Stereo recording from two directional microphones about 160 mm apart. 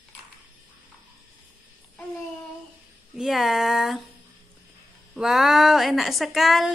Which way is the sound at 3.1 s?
Centre (ahead or behind).